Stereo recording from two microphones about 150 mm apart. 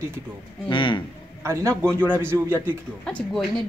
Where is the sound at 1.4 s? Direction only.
20° right (ahead or behind).